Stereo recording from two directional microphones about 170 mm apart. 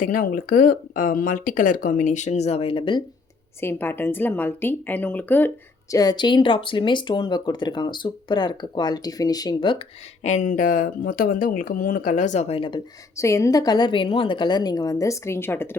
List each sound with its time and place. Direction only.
0.0 s speech: 55° left (ahead or behind); by 3.0 s 30° left (ahead or behind)
3.6 s a woman's voice: 15° left (ahead or behind)
5.9 s speech: 20° left (ahead or behind)
10.2 s speech: 45° left (ahead or behind); by 12.8 s 30° left (ahead or behind)
13.1 s speech: 20° left (ahead or behind)